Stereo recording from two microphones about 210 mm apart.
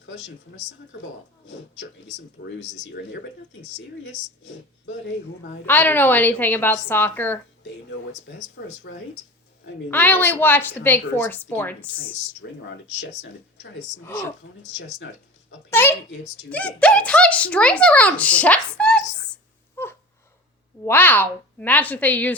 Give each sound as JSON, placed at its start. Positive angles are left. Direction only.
{"t": 3.8, "sound": "speech", "side_deg": 60}
{"t": 5.6, "sound": "a woman's voice", "side_deg": 10}
{"t": 8.5, "sound": "speech", "side_deg": 50}
{"t": 9.9, "sound": "a woman's voice", "side_deg": 10}
{"t": 12.4, "sound": "speech", "side_deg": 60}
{"t": 15.7, "sound": "a woman's voice", "side_deg": 10}
{"t": 19.7, "sound": "a sound", "side_deg": 10}
{"t": 20.8, "sound": "a woman's voice", "side_deg": 10}